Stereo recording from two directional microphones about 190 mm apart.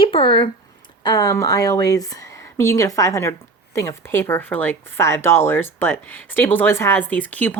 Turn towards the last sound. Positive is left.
turn(degrees=10)  # may be behind; listen again after turning